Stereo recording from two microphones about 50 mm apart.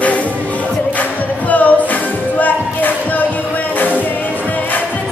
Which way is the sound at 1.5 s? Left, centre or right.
Left.